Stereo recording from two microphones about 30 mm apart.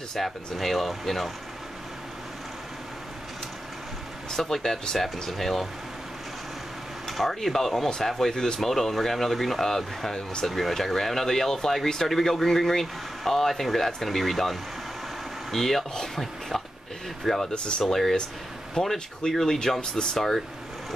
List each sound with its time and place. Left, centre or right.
0.2 s speech: centre
4.3 s speech: centre
7.1 s speech: centre
17.5 s speech: left
17.8 s speech: centre